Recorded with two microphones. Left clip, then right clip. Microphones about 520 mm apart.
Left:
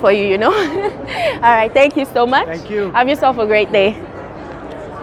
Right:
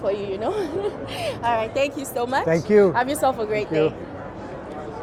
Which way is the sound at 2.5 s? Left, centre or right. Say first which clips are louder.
Right 4 dB; right.